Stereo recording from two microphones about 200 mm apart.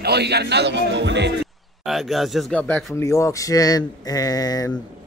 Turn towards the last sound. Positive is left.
turn(degrees=20)  # may be behind; listen again after turning